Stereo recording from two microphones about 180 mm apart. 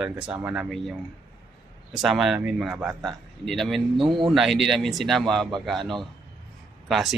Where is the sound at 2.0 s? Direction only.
Centre (ahead or behind).